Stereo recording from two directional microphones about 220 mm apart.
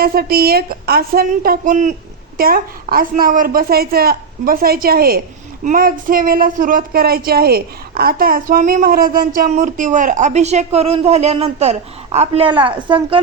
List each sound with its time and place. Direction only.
0.0 s a woman's voice: 45° right (ahead or behind); by 13.2 s 25° right (ahead or behind)